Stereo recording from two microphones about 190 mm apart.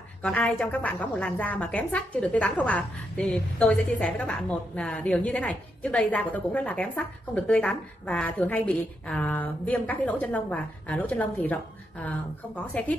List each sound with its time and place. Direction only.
0.2 s a woman's voice: 5° left (ahead or behind)